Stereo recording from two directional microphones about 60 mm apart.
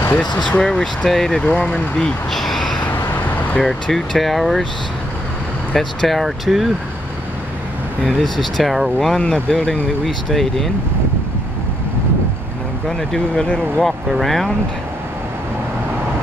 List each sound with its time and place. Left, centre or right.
0.5 s speech: centre
2.9 s vehicle: left
3.5 s speech: centre
5.8 s speech: centre
8.0 s speech: centre
9.2 s speech: centre
12.8 s speech: centre